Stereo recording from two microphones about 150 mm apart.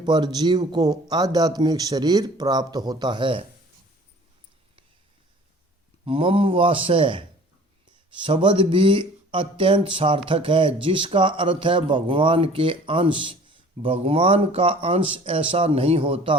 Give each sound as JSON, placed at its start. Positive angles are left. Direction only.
{"t": 0.0, "sound": "speech", "side_deg": -30}
{"t": 6.1, "sound": "speech", "side_deg": -35}